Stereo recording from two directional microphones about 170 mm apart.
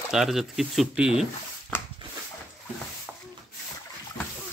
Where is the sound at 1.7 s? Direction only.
15° left (ahead or behind).